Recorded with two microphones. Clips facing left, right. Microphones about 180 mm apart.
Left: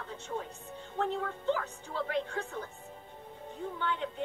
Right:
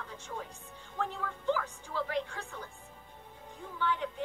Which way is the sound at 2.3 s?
40° left (ahead or behind).